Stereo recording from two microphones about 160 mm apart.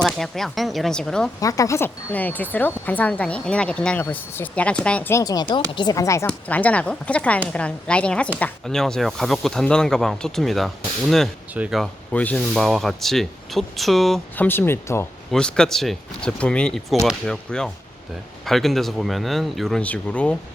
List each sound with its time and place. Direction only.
0.0 s speech: centre (ahead or behind)
1.4 s speech: 20° left (ahead or behind)
5.2 s speech: 25° left (ahead or behind)
6.2 s speech: 10° left (ahead or behind)
12.1 s speech: 10° left (ahead or behind)
14.4 s speech: 15° left (ahead or behind)